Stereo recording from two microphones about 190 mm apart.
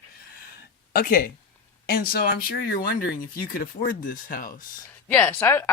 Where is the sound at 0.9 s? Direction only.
50° left (ahead or behind).